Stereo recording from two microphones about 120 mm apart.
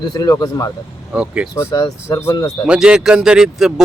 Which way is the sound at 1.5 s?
30° left (ahead or behind).